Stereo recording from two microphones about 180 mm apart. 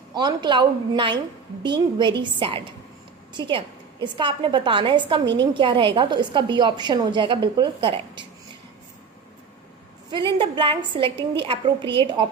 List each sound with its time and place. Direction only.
0.1 s a woman's voice: 25° right (ahead or behind)
10.1 s a woman's voice: 25° right (ahead or behind)